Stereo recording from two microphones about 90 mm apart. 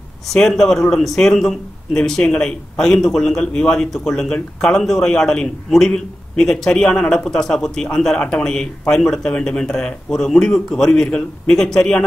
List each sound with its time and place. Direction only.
0.3 s speech: 5° left (ahead or behind)